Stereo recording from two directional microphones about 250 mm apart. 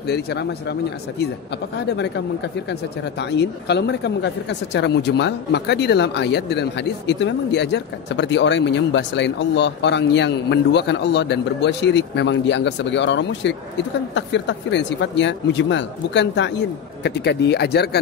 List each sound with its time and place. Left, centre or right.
0.0 s speech: left
1.8 s speech: left